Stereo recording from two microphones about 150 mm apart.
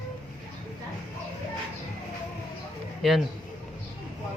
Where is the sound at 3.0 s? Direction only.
Centre (ahead or behind).